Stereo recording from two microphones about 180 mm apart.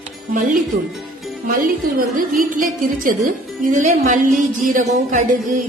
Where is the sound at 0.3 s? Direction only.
50° right (ahead or behind).